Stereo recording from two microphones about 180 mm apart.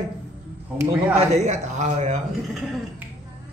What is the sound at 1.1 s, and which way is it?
A man's voice, 40° right (ahead or behind).